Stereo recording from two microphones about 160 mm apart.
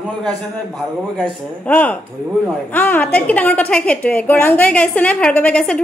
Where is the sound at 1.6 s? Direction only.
10° left (ahead or behind).